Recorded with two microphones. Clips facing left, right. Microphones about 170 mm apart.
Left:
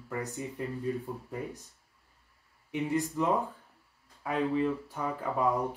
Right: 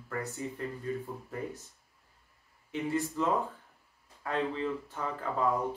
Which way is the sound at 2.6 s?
15° left (ahead or behind).